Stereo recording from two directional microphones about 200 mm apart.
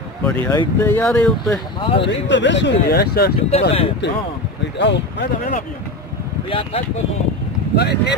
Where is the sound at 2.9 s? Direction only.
50° left (ahead or behind).